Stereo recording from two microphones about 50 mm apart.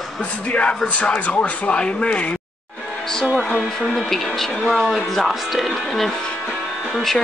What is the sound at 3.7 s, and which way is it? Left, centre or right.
Speech, centre.